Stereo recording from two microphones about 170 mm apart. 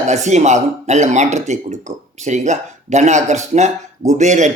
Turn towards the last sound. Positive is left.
turn(degrees=-45)  # may be behind; listen again after turning